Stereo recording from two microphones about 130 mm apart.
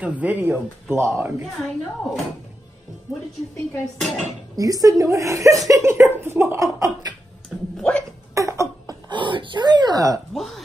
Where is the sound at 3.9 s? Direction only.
Centre (ahead or behind).